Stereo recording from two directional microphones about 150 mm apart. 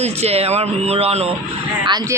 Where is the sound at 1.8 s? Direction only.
30° right (ahead or behind).